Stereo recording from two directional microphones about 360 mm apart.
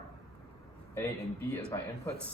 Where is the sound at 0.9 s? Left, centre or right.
Centre.